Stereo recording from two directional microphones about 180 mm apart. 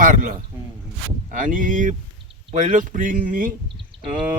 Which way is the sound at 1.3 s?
50° right (ahead or behind).